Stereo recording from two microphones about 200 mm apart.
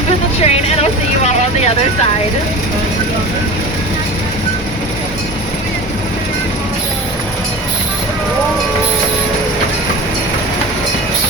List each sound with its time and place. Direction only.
0.4 s vehicle: 30° left (ahead or behind)